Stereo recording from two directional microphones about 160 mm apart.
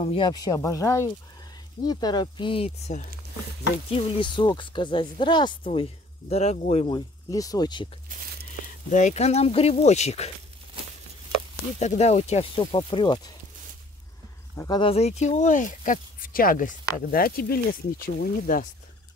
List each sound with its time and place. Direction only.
0.0 s speech: 35° left (ahead or behind)
3.9 s speech: 30° left (ahead or behind)
5.7 s speech: 40° left (ahead or behind)
7.2 s speech: 20° left (ahead or behind)
8.9 s speech: 45° left (ahead or behind)
12.0 s speech: 40° left (ahead or behind); by 13.3 s 25° left (ahead or behind)
14.8 s speech: 40° left (ahead or behind); by 18.7 s 65° left (ahead or behind)